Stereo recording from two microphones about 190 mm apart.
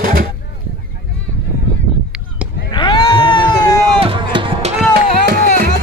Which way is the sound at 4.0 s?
30° right (ahead or behind).